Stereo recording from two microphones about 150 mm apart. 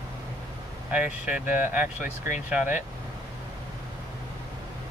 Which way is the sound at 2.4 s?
10° right (ahead or behind).